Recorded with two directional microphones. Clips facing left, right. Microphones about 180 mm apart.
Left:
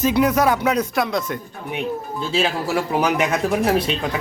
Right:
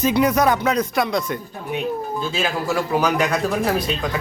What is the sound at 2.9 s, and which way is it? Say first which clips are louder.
Speech: even; 20° left (ahead or behind).